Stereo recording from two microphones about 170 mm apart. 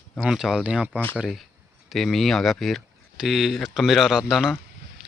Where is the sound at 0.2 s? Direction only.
Centre (ahead or behind).